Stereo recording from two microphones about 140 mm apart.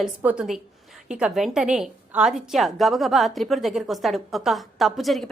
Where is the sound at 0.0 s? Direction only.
10° right (ahead or behind).